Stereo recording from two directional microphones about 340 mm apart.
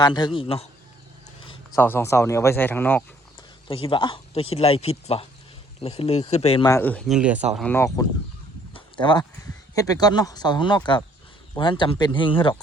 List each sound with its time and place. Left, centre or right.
0.0 s speech: centre